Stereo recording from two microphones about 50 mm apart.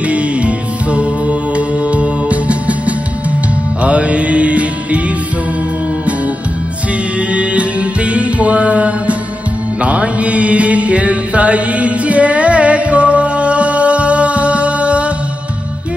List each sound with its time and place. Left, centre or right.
0.0 s music: right
7.2 s music: right
9.8 s mantra: right